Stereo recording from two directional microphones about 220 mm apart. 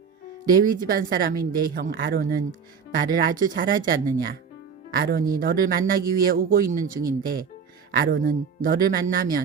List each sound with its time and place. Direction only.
0.4 s speech: 40° right (ahead or behind)